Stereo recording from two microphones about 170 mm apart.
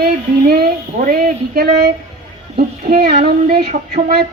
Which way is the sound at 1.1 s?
65° right (ahead or behind).